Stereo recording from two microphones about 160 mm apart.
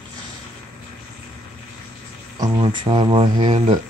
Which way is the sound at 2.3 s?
25° right (ahead or behind).